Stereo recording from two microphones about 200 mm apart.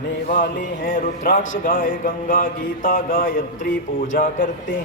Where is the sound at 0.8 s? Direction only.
45° left (ahead or behind).